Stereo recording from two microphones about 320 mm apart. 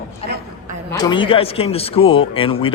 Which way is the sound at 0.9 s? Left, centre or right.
Centre.